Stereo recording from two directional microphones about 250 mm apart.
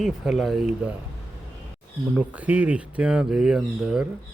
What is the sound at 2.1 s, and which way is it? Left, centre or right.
Speech, centre.